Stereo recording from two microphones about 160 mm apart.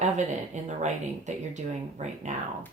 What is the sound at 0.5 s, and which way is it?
Speech, 45° right (ahead or behind).